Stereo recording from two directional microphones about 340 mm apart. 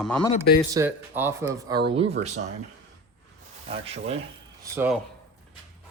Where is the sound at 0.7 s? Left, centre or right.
Centre.